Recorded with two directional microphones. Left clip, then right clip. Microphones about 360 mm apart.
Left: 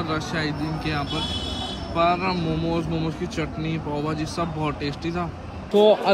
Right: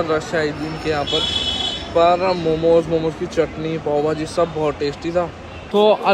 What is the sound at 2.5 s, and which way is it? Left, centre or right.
Speech, right.